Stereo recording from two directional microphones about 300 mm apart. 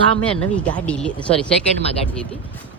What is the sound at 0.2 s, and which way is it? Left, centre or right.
Speech, centre.